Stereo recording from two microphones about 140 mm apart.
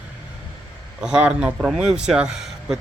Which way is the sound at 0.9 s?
5° right (ahead or behind).